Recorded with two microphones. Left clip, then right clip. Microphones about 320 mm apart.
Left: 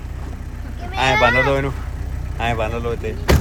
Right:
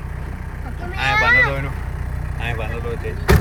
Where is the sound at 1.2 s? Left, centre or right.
Left.